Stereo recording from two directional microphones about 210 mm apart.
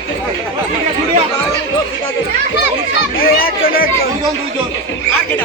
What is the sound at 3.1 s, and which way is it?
Speech, 45° left (ahead or behind).